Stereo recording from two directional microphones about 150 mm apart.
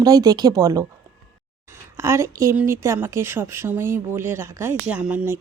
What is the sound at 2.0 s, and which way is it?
Speech, 20° right (ahead or behind).